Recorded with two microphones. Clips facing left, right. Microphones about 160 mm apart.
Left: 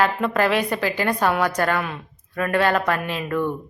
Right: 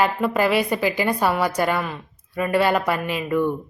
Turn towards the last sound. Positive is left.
turn(degrees=-10)  # may be behind; listen again after turning